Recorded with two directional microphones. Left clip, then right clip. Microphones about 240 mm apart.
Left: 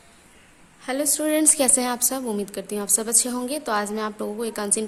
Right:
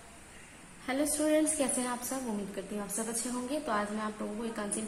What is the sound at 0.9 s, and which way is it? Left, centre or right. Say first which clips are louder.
A woman's voice: left 6 dB; left.